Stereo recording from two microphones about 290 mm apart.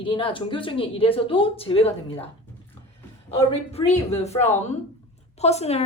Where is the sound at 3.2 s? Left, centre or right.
Left.